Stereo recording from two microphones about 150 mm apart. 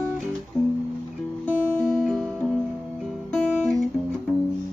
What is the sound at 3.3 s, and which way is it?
Guitar, 5° left (ahead or behind).